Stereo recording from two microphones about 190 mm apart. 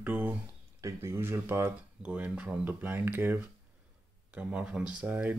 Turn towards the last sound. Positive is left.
turn(degrees=-10)  # may be behind; listen again after turning